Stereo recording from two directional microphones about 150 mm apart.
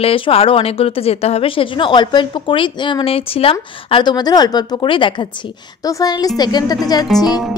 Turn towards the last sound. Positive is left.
turn(degrees=25)  # may be behind; listen again after turning